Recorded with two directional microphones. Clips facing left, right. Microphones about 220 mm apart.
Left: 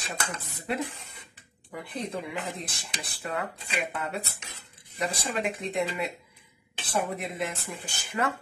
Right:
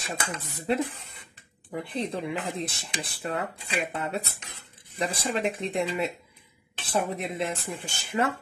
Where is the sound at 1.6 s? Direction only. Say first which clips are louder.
Right 4 dB; 25° right (ahead or behind).